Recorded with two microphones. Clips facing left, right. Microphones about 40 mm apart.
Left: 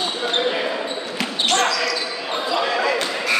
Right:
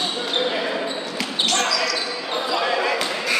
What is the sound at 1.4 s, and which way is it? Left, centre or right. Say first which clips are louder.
Basketball bounce: left 2 dB; left.